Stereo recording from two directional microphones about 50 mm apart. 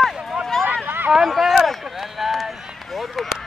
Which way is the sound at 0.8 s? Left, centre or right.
Right.